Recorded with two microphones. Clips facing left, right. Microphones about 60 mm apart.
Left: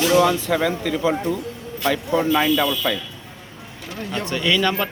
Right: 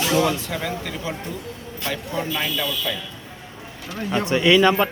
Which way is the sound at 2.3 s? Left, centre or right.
Left.